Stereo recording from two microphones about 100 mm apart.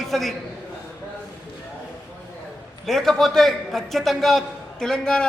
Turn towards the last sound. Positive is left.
turn(degrees=5)  # may be behind; listen again after turning